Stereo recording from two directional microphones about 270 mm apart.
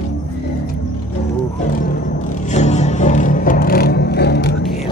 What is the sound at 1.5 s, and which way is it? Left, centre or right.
Music, left.